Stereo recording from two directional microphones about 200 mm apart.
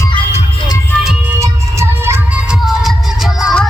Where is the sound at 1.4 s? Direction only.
15° right (ahead or behind).